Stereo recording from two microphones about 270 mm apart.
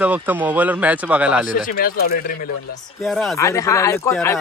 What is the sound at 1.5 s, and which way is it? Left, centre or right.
Speech, left.